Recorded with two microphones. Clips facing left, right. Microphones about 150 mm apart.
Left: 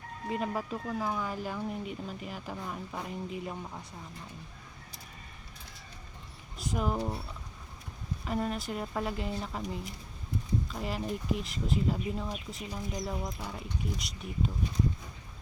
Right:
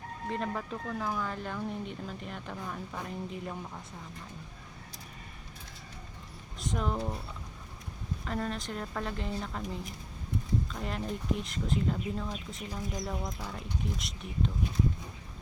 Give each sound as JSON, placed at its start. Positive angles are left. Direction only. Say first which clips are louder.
{"t": 0.3, "sound": "speech", "louder": "left 2 dB", "side_deg": 10}
{"t": 6.6, "sound": "speech", "louder": "left 1 dB", "side_deg": 5}
{"t": 8.2, "sound": "speech", "louder": "left 2 dB", "side_deg": 10}